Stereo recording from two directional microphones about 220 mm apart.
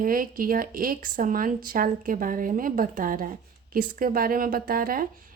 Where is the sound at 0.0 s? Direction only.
40° right (ahead or behind).